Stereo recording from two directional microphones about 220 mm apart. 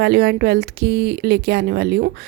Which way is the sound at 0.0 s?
45° right (ahead or behind).